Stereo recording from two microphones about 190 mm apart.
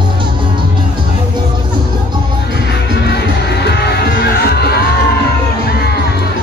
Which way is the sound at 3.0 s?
60° left (ahead or behind).